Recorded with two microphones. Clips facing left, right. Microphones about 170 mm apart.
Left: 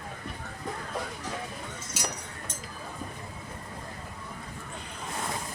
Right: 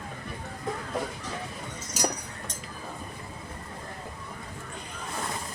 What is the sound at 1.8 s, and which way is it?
Chink, 40° right (ahead or behind).